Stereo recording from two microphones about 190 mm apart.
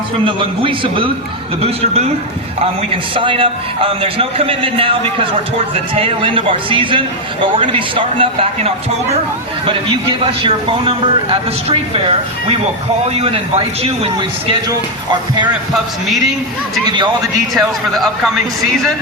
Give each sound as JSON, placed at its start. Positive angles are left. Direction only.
{"t": 0.3, "sound": "a man's voice", "side_deg": -25}
{"t": 10.4, "sound": "a man's voice", "side_deg": -30}
{"t": 13.1, "sound": "a man's voice", "side_deg": -30}
{"t": 16.8, "sound": "a man's voice", "side_deg": -25}
{"t": 17.5, "sound": "a man's voice", "side_deg": 0}